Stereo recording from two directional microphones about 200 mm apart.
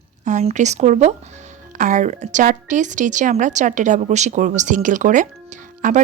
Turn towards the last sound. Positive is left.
turn(degrees=-40)  # may be behind; listen again after turning